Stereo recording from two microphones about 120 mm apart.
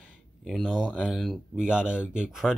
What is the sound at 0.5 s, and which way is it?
Speech, centre (ahead or behind).